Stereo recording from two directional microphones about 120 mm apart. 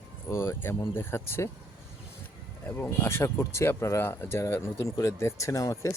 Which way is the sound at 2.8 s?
20° left (ahead or behind).